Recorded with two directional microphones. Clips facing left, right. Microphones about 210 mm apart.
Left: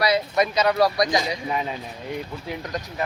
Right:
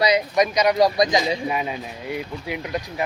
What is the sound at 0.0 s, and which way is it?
Speech, 15° right (ahead or behind).